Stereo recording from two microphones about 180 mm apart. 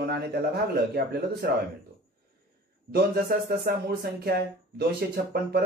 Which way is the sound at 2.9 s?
60° right (ahead or behind).